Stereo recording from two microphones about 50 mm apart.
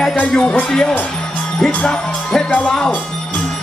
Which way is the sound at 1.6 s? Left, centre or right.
Centre.